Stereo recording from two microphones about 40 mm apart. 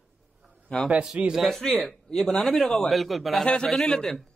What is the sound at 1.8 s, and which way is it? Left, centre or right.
A man's voice, centre.